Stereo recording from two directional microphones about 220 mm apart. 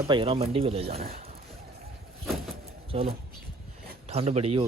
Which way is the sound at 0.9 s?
45° right (ahead or behind).